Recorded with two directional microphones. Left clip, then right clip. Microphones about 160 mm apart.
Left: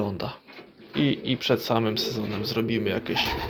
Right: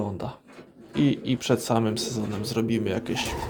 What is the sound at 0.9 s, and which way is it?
Speech, 25° right (ahead or behind).